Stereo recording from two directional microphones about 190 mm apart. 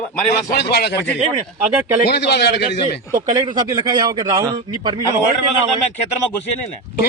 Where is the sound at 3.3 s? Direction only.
25° right (ahead or behind).